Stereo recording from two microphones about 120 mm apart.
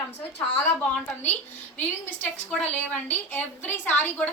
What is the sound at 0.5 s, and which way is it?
A woman's voice, 15° left (ahead or behind).